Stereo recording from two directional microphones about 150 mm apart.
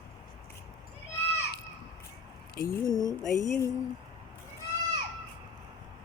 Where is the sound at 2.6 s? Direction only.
25° left (ahead or behind).